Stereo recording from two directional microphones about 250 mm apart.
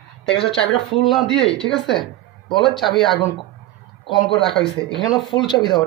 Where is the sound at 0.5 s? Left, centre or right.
Centre.